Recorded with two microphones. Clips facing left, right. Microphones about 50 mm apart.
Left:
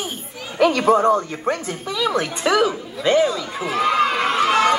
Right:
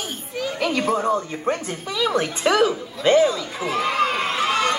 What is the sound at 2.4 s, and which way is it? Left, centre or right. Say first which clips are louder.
Speech: even; centre.